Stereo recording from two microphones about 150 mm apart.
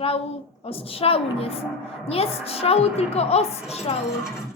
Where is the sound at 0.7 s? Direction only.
40° left (ahead or behind).